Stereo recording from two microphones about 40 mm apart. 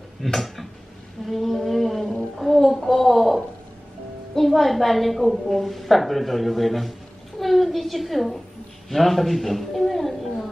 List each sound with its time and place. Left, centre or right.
0.2 s speech: centre
1.2 s a sound: centre
4.4 s a woman's voice: centre